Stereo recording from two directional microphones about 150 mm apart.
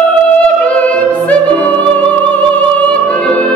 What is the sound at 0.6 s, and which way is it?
Music, 10° left (ahead or behind).